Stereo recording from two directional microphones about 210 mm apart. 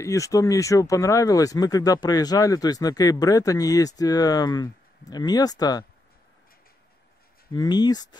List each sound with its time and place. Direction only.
0.0 s speech: 15° left (ahead or behind)
7.5 s speech: 20° left (ahead or behind)